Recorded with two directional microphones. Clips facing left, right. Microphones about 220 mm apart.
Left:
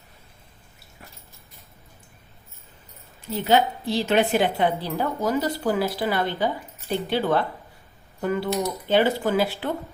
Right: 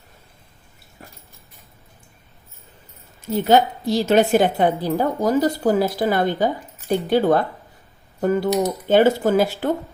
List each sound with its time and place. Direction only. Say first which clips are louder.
3.3 s a woman's voice: right 4 dB; 45° right (ahead or behind)